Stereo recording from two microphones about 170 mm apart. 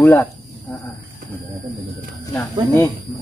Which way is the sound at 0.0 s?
15° left (ahead or behind).